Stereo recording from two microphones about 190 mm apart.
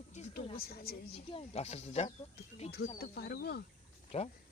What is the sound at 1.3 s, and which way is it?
Speech, 30° left (ahead or behind).